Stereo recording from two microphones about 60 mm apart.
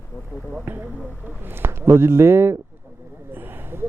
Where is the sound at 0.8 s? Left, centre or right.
Right.